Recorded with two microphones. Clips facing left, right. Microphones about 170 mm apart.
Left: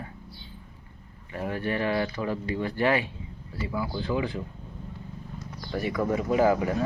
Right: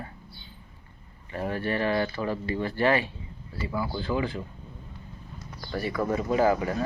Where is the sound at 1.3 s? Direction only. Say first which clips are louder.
Right 1 dB; 10° left (ahead or behind).